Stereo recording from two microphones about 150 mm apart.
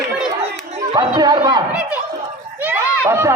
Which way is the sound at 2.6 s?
15° right (ahead or behind).